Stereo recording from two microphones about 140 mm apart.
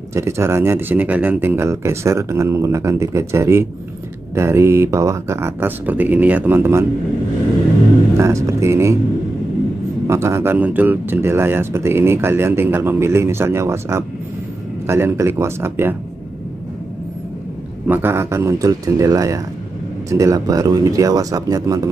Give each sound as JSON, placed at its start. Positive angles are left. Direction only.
{"t": 0.1, "sound": "speech", "side_deg": -20}
{"t": 8.2, "sound": "speech", "side_deg": -20}
{"t": 10.0, "sound": "speech", "side_deg": -20}
{"t": 17.8, "sound": "speech", "side_deg": -15}